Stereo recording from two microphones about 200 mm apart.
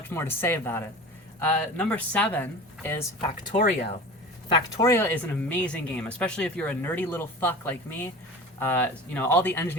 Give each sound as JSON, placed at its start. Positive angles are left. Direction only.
{"t": 0.1, "sound": "speech", "side_deg": 10}
{"t": 4.4, "sound": "speech", "side_deg": 25}
{"t": 4.9, "sound": "speech", "side_deg": 10}